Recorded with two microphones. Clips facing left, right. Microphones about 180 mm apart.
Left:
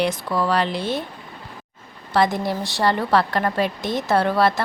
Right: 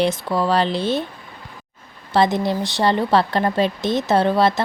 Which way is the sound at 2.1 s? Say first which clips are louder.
Right 2 dB; 25° right (ahead or behind).